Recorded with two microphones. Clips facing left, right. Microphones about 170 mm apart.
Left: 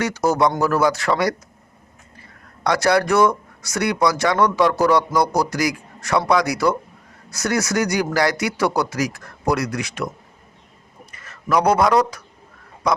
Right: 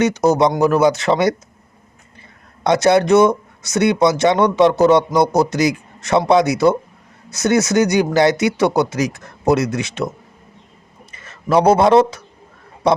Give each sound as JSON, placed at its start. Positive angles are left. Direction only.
{"t": 0.0, "sound": "speech", "side_deg": -20}
{"t": 2.6, "sound": "speech", "side_deg": -20}
{"t": 11.1, "sound": "a man's voice", "side_deg": -25}